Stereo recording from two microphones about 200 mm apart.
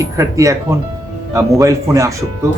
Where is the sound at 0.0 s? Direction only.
15° right (ahead or behind).